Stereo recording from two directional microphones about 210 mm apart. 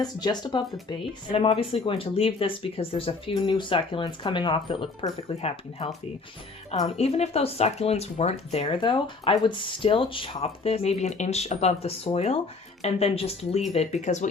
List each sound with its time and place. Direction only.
0.0 s speech: 20° left (ahead or behind)